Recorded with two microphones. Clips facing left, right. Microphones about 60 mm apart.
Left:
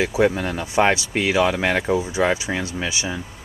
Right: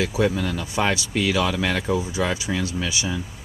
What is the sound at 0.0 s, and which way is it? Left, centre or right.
Speech, left.